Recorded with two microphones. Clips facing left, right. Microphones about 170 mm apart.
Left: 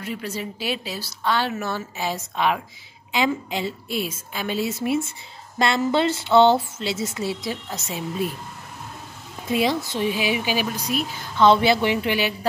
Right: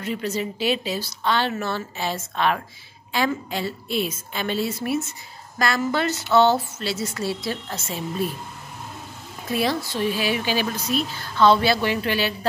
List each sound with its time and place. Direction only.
0.0 s speech: 5° left (ahead or behind)
9.5 s speech: 20° left (ahead or behind)